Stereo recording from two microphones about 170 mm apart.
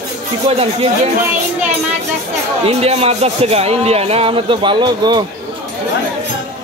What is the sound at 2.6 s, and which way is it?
Speech, 35° right (ahead or behind).